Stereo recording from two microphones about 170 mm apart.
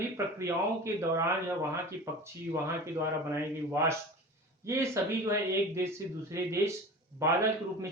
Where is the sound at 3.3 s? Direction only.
15° right (ahead or behind).